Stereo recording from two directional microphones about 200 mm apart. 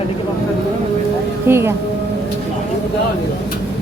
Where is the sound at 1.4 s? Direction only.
10° right (ahead or behind).